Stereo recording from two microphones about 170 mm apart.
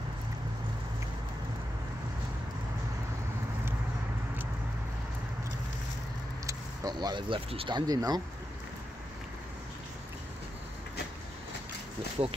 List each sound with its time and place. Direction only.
6.4 s speech: 20° right (ahead or behind)